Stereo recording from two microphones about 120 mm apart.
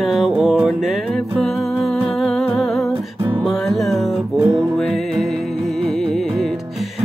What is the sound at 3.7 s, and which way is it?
Music, centre (ahead or behind).